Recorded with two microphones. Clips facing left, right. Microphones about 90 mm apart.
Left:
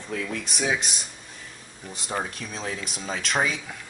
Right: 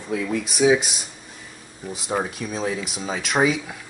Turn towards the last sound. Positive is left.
turn(degrees=-5)  # may be behind; listen again after turning